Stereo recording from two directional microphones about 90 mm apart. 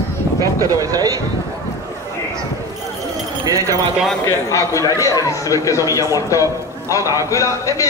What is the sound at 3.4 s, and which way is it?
Speech, 35° right (ahead or behind).